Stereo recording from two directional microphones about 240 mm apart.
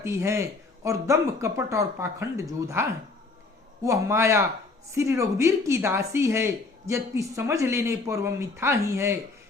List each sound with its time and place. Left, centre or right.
0.0 s speech: centre
3.8 s speech: centre